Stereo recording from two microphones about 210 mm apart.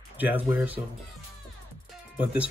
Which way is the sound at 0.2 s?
10° right (ahead or behind).